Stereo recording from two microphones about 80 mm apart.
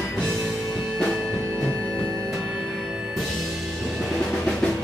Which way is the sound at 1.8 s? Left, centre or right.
Centre.